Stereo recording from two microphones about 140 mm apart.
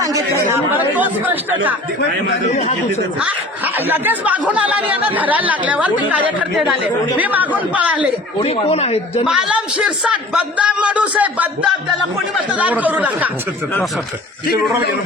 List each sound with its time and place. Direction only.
0.0 s chatter: 25° right (ahead or behind)
0.9 s a man's voice: 10° right (ahead or behind)
3.2 s a man's voice: 10° right (ahead or behind)
8.4 s a man's voice: 45° left (ahead or behind)
9.2 s a man's voice: 5° right (ahead or behind)